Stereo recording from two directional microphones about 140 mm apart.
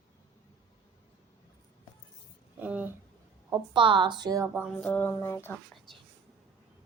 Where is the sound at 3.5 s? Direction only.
35° right (ahead or behind).